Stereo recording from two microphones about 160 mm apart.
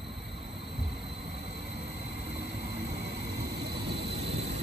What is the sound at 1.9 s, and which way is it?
Vehicle, 90° right.